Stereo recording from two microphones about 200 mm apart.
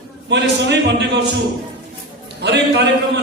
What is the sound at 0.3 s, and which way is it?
Speech, 60° right (ahead or behind).